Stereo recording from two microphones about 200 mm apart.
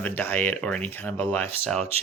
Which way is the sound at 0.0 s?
10° left (ahead or behind).